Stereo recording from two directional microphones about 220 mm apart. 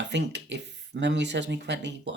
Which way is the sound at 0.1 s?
50° right (ahead or behind).